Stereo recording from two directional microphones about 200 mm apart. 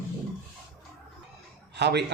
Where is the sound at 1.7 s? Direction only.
55° right (ahead or behind).